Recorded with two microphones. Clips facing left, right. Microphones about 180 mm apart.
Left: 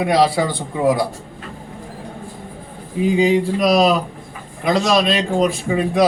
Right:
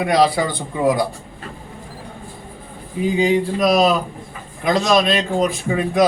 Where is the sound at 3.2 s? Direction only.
Centre (ahead or behind).